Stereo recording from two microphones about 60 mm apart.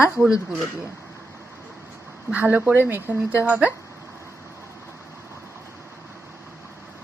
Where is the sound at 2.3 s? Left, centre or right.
Right.